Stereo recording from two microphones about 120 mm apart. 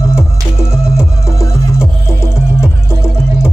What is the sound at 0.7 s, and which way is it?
Music, 5° right (ahead or behind).